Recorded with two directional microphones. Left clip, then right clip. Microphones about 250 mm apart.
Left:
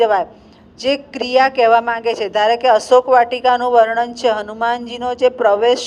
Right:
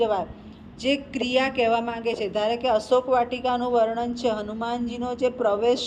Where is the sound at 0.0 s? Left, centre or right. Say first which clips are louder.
Left 9 dB; left.